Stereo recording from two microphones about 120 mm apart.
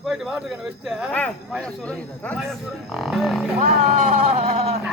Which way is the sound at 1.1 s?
10° left (ahead or behind).